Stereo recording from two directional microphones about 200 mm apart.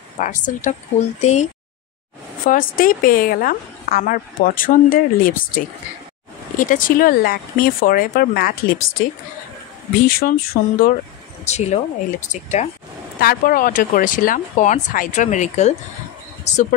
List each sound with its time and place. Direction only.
0.2 s a woman's voice: 40° left (ahead or behind)
11.4 s speech: 35° left (ahead or behind)
13.2 s speech: 45° left (ahead or behind)